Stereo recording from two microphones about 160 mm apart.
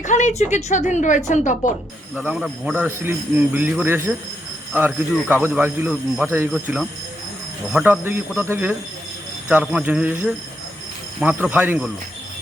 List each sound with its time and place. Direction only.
0.0 s speech: 50° left (ahead or behind)
2.2 s a man's voice: 5° right (ahead or behind)